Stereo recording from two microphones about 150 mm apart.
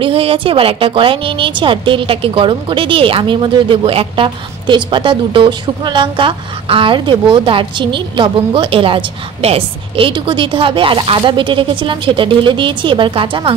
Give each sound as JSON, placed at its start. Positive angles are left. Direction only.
{"t": 0.0, "sound": "a woman's voice", "side_deg": -40}